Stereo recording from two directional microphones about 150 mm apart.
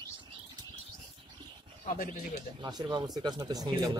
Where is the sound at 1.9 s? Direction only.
75° left (ahead or behind).